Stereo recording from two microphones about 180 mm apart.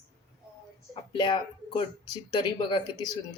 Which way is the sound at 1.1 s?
25° left (ahead or behind).